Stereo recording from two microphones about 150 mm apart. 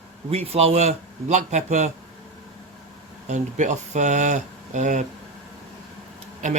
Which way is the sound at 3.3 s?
50° right (ahead or behind).